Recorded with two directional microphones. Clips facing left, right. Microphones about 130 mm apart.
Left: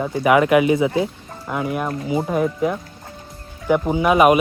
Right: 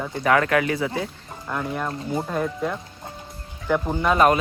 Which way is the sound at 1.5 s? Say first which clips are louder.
Left 4 dB; 10° left (ahead or behind).